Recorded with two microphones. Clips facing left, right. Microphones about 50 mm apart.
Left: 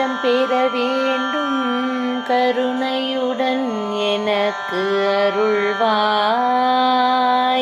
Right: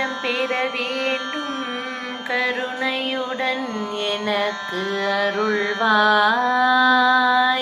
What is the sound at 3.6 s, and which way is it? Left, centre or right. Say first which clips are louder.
Music: left 5 dB; left.